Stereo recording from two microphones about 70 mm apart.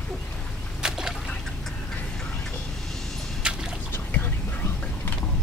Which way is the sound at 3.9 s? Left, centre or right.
Left.